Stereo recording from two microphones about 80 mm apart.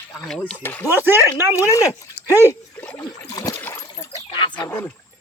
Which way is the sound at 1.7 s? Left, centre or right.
Left.